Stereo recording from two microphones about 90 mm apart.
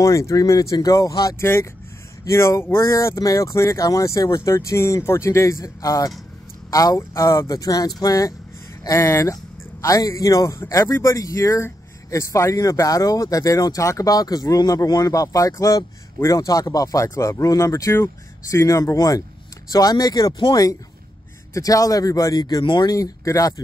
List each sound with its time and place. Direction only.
0.0 s speech: 35° left (ahead or behind)
1.4 s speech: 30° left (ahead or behind); by 20.4 s 45° left (ahead or behind)
21.5 s speech: 40° left (ahead or behind)
22.6 s speech: 65° left (ahead or behind)
22.8 s speech: 40° left (ahead or behind)